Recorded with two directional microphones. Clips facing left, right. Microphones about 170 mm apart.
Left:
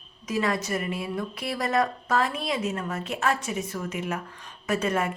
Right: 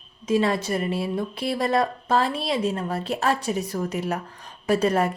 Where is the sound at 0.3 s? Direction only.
30° right (ahead or behind).